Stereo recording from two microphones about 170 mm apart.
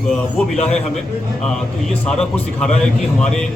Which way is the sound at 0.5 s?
40° left (ahead or behind).